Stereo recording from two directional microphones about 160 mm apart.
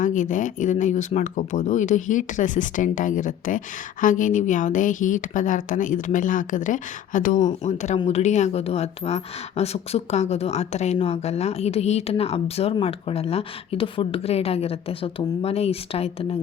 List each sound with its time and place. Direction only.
0.0 s a woman's voice: 55° left (ahead or behind)